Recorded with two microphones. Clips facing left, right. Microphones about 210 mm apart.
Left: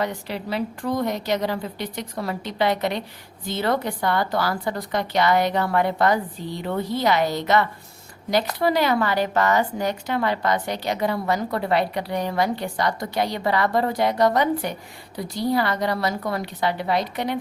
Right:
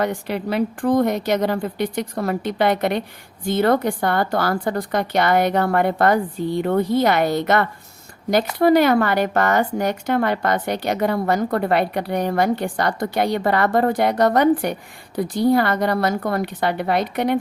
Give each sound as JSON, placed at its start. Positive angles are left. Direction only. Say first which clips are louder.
{"t": 0.0, "sound": "a woman's voice", "louder": "right 5 dB", "side_deg": -55}